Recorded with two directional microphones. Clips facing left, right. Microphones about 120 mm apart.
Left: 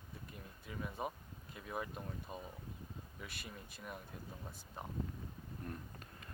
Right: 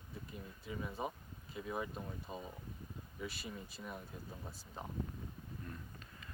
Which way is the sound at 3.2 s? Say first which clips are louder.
Right 7 dB; 60° left (ahead or behind).